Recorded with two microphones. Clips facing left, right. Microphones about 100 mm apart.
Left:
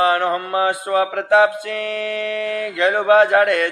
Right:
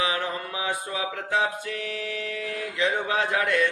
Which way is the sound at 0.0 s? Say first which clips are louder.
Left 10 dB; 60° left (ahead or behind).